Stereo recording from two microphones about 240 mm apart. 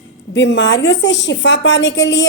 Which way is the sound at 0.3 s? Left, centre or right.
Left.